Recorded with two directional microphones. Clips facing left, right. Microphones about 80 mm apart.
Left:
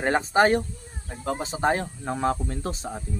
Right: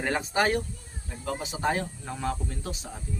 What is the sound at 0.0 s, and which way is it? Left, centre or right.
Speech, left.